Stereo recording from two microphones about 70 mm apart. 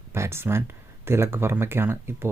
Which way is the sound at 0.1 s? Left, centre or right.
Right.